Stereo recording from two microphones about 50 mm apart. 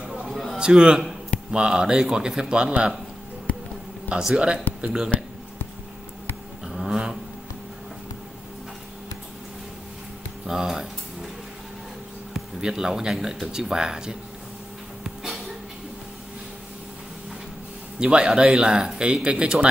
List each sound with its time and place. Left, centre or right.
0.1 s a sound: centre
0.6 s speech: centre
3.5 s a sound: left
4.2 s speech: centre
6.7 s vehicle: centre
10.4 s speech: centre
12.4 s speech: centre
17.9 s speech: centre